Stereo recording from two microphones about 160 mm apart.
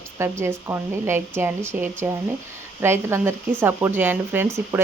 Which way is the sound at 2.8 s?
15° right (ahead or behind).